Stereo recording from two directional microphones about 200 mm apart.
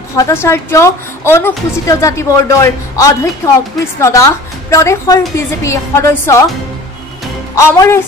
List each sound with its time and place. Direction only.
0.1 s a woman's voice: 15° left (ahead or behind)
7.5 s a woman's voice: 15° left (ahead or behind)